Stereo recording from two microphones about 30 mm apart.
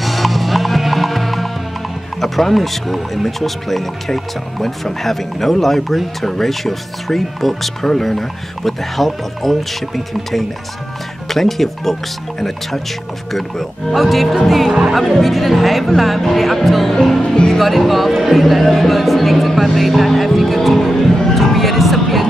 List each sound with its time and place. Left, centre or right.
0.0 s music: centre
2.1 s speech: centre
21.0 s music: centre